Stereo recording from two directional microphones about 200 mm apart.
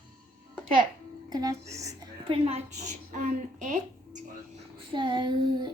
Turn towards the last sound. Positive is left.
turn(degrees=-25)  # may be behind; listen again after turning